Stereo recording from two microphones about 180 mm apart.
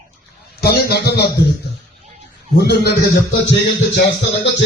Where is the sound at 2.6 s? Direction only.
65° left (ahead or behind).